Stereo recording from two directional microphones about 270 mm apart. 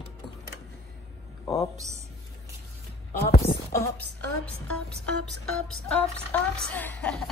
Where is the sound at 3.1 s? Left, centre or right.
Left.